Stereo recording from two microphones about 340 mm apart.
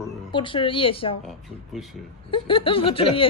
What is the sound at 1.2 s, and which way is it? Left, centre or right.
Speech, centre.